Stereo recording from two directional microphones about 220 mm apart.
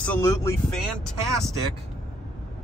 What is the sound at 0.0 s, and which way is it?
Speech, 10° left (ahead or behind).